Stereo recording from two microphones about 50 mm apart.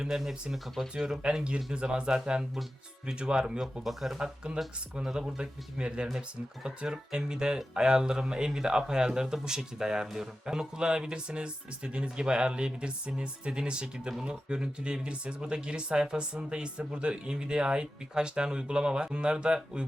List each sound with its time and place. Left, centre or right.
0.0 s speech: centre
1.2 s speech: centre